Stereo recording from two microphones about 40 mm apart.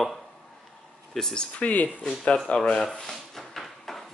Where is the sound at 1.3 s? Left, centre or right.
Left.